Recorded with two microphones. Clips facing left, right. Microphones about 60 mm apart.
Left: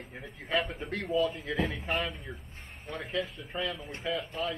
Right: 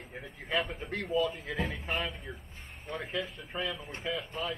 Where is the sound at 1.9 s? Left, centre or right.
Centre.